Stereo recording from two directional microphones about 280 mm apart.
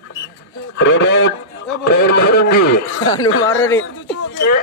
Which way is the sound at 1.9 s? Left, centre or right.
Left.